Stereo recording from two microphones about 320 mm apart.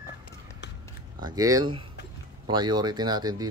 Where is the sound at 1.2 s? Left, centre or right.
Centre.